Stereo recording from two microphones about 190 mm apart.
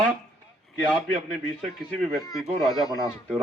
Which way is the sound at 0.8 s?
Centre (ahead or behind).